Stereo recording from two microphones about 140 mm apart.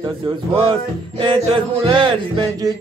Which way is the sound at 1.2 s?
35° right (ahead or behind).